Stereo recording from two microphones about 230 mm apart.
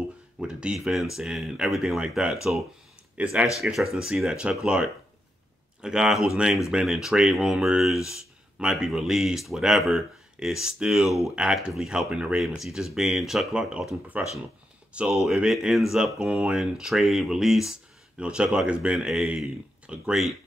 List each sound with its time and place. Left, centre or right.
0.4 s speech: centre
5.8 s speech: centre